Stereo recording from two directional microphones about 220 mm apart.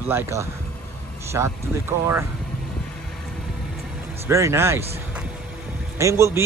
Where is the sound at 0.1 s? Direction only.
10° right (ahead or behind).